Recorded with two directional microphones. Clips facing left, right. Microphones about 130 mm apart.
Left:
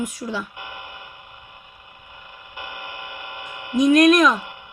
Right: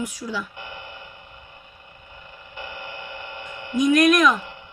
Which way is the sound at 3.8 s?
35° left (ahead or behind).